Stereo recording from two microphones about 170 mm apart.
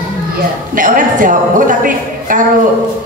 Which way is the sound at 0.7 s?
50° right (ahead or behind).